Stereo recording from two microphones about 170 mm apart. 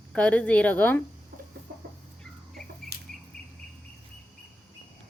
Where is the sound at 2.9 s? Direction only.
70° right (ahead or behind).